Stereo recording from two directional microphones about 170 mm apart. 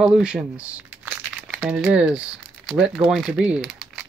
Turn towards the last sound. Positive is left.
turn(degrees=-5)  # may be behind; listen again after turning